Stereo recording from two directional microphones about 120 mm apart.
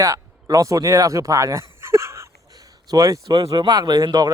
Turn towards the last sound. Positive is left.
turn(degrees=-35)  # may be behind; listen again after turning